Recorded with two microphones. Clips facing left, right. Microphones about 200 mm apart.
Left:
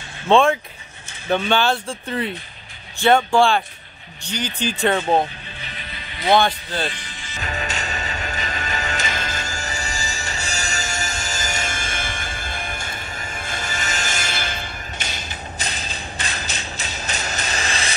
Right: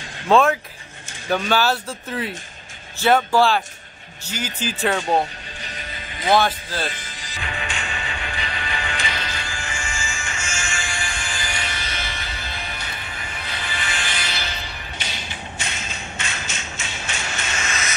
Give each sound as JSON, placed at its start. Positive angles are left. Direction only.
{"t": 0.3, "sound": "speech", "side_deg": -5}
{"t": 5.6, "sound": "music", "side_deg": -40}
{"t": 6.3, "sound": "speech", "side_deg": 0}
{"t": 6.9, "sound": "music", "side_deg": -40}
{"t": 7.3, "sound": "music", "side_deg": 40}